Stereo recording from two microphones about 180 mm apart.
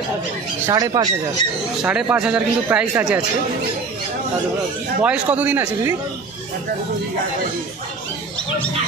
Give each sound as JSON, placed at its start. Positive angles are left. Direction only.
{"t": 0.7, "sound": "speech", "side_deg": -20}
{"t": 1.8, "sound": "speech", "side_deg": -5}
{"t": 5.0, "sound": "speech", "side_deg": -5}